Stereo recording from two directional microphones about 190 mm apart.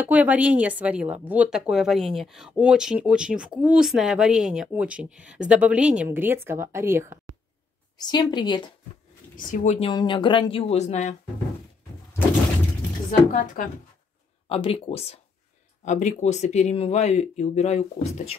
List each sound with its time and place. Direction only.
0.1 s a woman's voice: 10° right (ahead or behind)
8.0 s speech: 20° left (ahead or behind)
9.5 s a woman's voice: 45° left (ahead or behind)
9.8 s speech: 25° left (ahead or behind)
13.3 s a woman's voice: 45° left (ahead or behind)
14.5 s speech: 30° left (ahead or behind)